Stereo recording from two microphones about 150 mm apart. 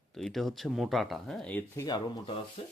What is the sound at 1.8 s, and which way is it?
Speech, 25° left (ahead or behind).